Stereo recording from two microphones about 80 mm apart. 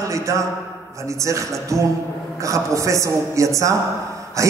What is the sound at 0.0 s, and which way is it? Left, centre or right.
A man's voice, right.